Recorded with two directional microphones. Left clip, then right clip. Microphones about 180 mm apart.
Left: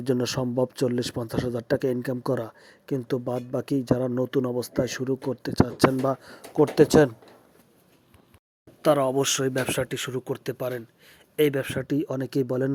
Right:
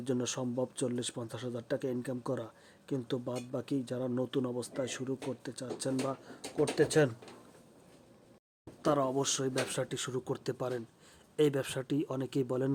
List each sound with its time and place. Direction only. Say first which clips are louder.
0.0 s a man's voice: left 9 dB; 35° left (ahead or behind)
8.8 s speech: left 9 dB; 25° left (ahead or behind)